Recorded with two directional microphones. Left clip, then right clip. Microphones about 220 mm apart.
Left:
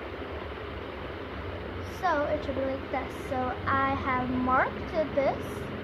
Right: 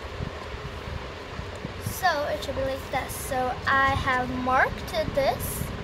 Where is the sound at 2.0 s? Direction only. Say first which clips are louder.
Right 2 dB; 45° right (ahead or behind).